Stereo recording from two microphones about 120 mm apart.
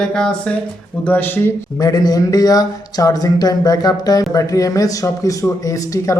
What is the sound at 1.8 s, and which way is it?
Speech, 35° left (ahead or behind).